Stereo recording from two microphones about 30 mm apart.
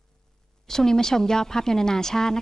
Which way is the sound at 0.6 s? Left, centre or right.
Centre.